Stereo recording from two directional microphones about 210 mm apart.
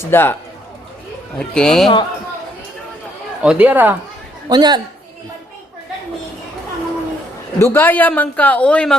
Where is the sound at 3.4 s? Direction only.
5° right (ahead or behind).